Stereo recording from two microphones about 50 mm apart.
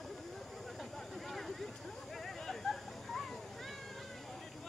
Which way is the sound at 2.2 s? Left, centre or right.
Centre.